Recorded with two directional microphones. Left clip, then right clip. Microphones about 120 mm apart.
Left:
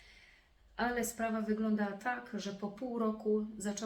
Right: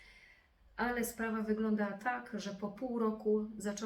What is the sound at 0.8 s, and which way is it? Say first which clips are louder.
A woman's voice: left 1 dB; 25° left (ahead or behind).